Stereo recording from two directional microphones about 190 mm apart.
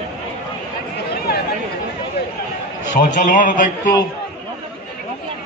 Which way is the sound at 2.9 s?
45° left (ahead or behind).